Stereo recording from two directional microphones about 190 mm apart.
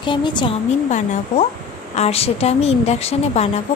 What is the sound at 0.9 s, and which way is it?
A woman's voice, 40° left (ahead or behind).